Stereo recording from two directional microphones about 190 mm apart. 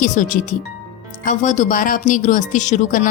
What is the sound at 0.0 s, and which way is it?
A woman's voice, 40° left (ahead or behind).